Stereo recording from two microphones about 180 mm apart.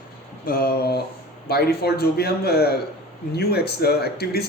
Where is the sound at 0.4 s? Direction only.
55° left (ahead or behind).